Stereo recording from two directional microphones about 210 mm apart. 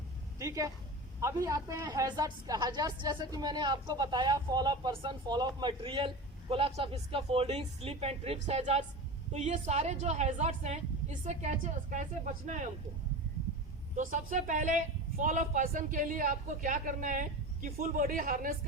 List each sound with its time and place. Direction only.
0.3 s a woman's voice: 15° right (ahead or behind); by 12.6 s 35° right (ahead or behind)
13.9 s speech: 40° right (ahead or behind)